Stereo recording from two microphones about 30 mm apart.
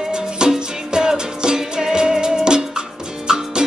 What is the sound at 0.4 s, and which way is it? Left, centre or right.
Music, right.